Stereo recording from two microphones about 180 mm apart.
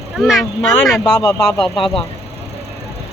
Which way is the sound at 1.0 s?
20° left (ahead or behind).